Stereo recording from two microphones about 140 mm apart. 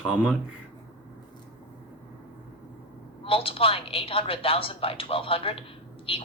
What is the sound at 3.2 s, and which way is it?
A woman's voice, 40° left (ahead or behind).